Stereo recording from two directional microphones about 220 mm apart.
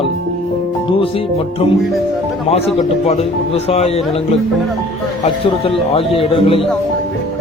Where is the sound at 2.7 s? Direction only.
30° left (ahead or behind).